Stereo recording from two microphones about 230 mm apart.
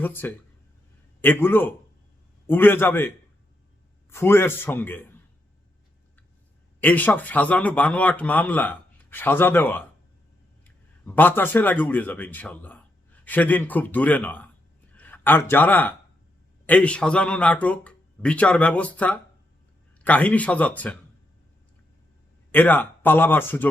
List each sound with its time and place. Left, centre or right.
0.0 s speech: centre
4.1 s speech: centre
6.8 s speech: centre
22.5 s speech: centre